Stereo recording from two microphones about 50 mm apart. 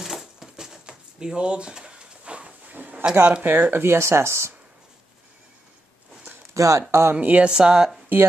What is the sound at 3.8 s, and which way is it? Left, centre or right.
Speech, right.